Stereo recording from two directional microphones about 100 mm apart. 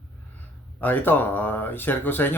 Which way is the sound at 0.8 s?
20° left (ahead or behind).